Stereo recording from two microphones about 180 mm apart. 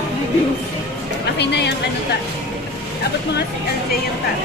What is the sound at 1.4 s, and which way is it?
Speech, 70° left (ahead or behind).